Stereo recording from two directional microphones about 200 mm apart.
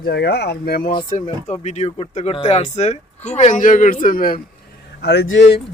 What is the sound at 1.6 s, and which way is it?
Speech, 35° left (ahead or behind).